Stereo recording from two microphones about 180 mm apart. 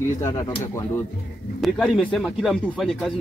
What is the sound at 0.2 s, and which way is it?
Speech, 15° left (ahead or behind).